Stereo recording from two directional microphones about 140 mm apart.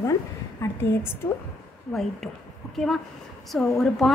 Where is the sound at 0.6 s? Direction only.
20° left (ahead or behind).